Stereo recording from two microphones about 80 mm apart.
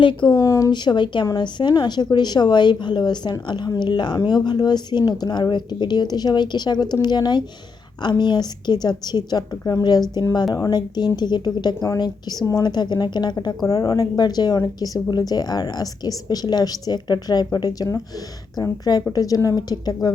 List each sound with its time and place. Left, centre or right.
0.0 s speech: left
0.4 s speech: left
0.7 s speech: left
1.3 s speech: left
13.7 s a woman's voice: left